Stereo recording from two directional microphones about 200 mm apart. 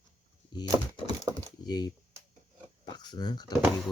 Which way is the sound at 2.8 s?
20° left (ahead or behind).